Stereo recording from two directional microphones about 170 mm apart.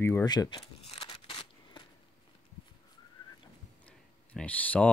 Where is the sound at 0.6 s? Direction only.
35° left (ahead or behind).